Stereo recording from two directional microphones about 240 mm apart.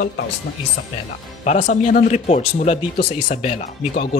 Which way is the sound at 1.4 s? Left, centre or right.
Left.